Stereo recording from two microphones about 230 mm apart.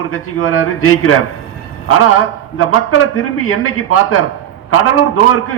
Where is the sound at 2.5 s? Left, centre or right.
Left.